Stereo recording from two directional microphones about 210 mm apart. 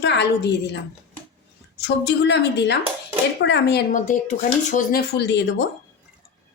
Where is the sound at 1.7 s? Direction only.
55° left (ahead or behind).